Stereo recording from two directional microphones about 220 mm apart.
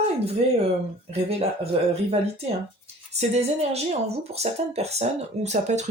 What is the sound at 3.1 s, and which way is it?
Speech, 30° right (ahead or behind).